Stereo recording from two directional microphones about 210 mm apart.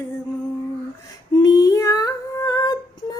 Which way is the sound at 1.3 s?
20° left (ahead or behind).